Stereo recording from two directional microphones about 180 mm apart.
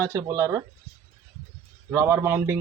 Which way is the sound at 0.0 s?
15° right (ahead or behind).